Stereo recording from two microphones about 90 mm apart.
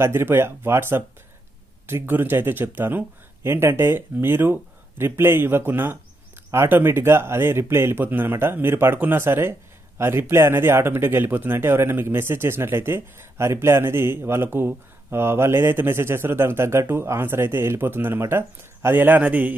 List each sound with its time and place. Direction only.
0.0 s speech: 25° right (ahead or behind)